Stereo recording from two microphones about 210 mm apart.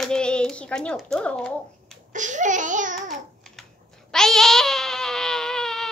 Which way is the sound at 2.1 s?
35° right (ahead or behind).